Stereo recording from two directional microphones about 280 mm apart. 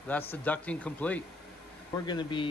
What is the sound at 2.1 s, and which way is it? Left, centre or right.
Speech, centre.